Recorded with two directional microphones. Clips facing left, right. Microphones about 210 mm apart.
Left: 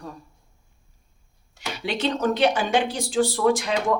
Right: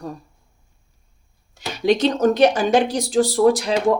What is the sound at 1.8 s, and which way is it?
Speech, 40° right (ahead or behind).